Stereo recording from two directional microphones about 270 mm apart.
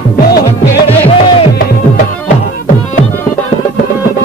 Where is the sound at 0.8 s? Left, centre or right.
Left.